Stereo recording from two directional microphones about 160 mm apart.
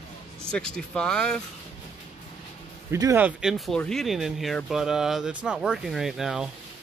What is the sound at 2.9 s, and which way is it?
Speech, 20° right (ahead or behind).